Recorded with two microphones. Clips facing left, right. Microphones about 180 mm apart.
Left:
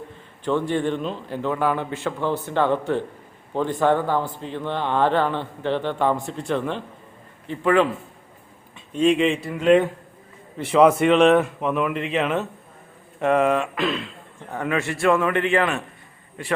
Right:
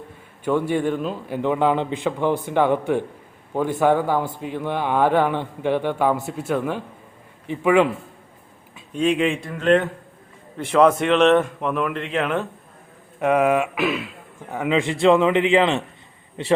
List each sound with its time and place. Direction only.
0.4 s a man's voice: 10° right (ahead or behind)
8.7 s a man's voice: centre (ahead or behind); by 16.5 s 25° right (ahead or behind)